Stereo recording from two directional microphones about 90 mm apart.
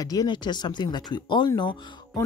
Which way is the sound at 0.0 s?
45° left (ahead or behind).